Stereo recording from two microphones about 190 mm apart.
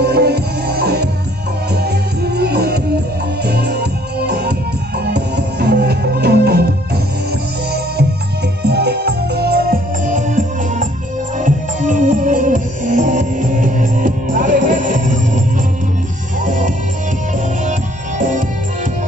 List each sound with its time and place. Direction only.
0.0 s music: 60° right (ahead or behind)
2.3 s music: 60° right (ahead or behind)
8.6 s music: 60° right (ahead or behind); by 15.4 s 40° right (ahead or behind)
16.4 s music: 40° right (ahead or behind)